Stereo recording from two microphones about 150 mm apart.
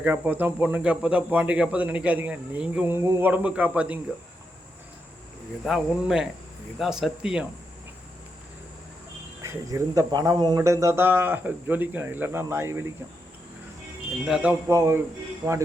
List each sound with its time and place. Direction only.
0.0 s speech: 10° right (ahead or behind)
5.6 s speech: 5° right (ahead or behind)
9.4 s speech: 20° right (ahead or behind)
14.3 s speech: 5° right (ahead or behind)
14.7 s speech: 20° right (ahead or behind)